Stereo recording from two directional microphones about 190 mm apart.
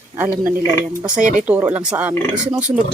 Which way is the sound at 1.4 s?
5° right (ahead or behind).